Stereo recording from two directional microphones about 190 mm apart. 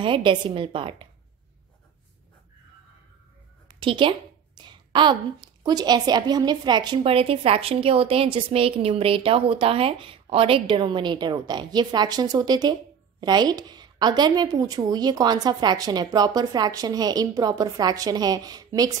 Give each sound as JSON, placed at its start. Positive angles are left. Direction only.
{"t": 0.0, "sound": "a woman's voice", "side_deg": -25}
{"t": 3.6, "sound": "a sound", "side_deg": -25}
{"t": 4.6, "sound": "a woman's voice", "side_deg": -25}